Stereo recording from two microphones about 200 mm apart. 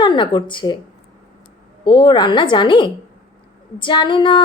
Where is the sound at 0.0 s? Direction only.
25° left (ahead or behind).